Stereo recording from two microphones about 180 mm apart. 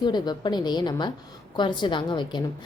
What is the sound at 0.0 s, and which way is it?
A woman's voice, 25° left (ahead or behind).